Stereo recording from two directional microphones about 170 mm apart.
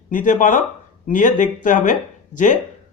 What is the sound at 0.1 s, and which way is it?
Speech, 50° left (ahead or behind).